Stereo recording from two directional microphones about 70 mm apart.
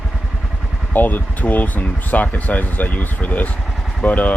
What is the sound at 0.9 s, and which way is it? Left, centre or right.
Speech, left.